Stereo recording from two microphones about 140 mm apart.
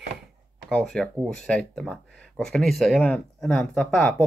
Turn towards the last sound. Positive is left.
turn(degrees=5)  # may be behind; listen again after turning